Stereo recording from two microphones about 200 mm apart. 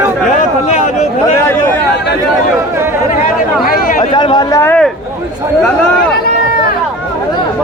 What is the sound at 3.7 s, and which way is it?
Chatter, 45° left (ahead or behind).